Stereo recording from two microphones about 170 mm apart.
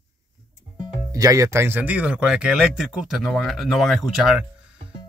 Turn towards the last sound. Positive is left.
turn(degrees=0)  # may be behind; listen again after turning